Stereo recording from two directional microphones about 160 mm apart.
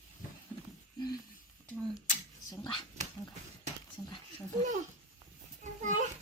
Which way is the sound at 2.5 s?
25° left (ahead or behind).